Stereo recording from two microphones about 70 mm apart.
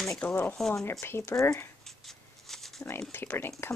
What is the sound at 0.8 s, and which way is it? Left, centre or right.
Speech, left.